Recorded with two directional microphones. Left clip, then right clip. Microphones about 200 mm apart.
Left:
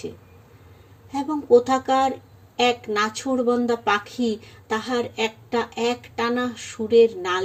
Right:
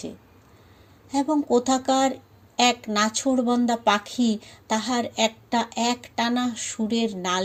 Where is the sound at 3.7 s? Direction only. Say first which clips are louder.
Even; 40° right (ahead or behind).